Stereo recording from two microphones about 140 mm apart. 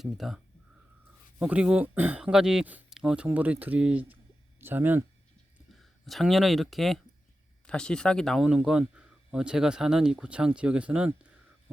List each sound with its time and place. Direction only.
0.0 s speech: centre (ahead or behind)
1.4 s speech: 10° right (ahead or behind)
6.1 s speech: centre (ahead or behind)